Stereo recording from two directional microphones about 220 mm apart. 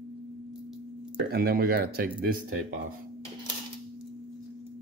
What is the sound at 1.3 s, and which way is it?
Speech, 45° right (ahead or behind).